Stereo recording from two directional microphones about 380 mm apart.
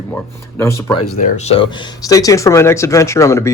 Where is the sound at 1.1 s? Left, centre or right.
Centre.